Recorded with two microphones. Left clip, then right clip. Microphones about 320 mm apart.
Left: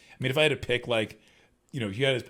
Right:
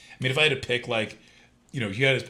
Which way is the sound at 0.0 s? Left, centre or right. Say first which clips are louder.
Right 2 dB; left.